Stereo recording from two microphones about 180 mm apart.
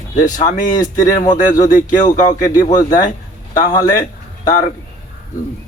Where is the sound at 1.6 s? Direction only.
45° left (ahead or behind).